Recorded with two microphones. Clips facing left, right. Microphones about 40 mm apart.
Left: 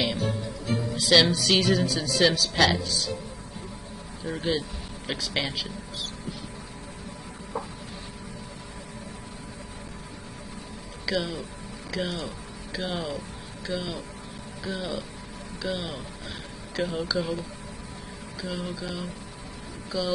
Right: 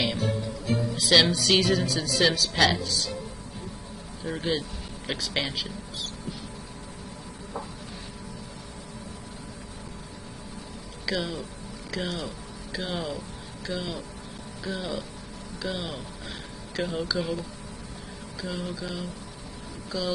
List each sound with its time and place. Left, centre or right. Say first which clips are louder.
0.0 s speech: even; centre
4.2 s a man's voice: left 1 dB; centre
11.1 s speech: left 1 dB; centre
18.4 s speech: even; centre